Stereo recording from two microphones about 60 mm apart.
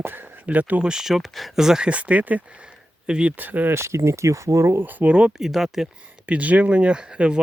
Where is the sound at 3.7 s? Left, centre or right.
Right.